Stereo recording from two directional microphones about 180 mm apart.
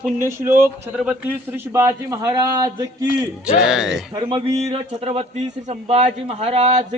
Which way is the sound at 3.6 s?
5° right (ahead or behind).